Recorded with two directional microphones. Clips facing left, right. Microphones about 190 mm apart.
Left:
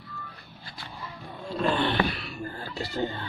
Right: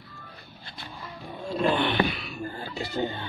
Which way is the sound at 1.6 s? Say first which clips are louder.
Right 1 dB; 15° right (ahead or behind).